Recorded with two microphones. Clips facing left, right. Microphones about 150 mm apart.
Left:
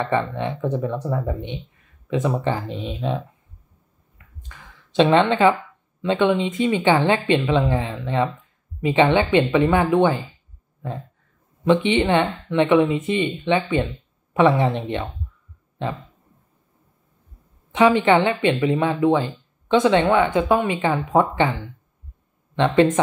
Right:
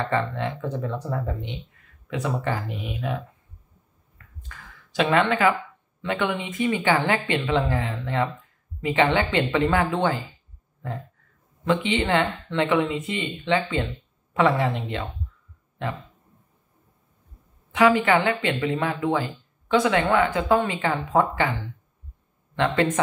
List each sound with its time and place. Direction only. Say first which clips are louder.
0.0 s speech: left 3 dB; 20° left (ahead or behind)
4.4 s a sound: even; 20° left (ahead or behind)
6.0 s speech: left 7 dB; 20° left (ahead or behind)
11.6 s speech: left 5 dB; 20° left (ahead or behind)
17.7 s speech: left 3 dB; 25° left (ahead or behind)